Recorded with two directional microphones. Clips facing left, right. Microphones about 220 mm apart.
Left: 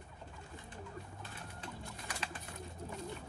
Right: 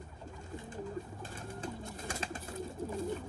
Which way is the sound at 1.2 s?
45° right (ahead or behind).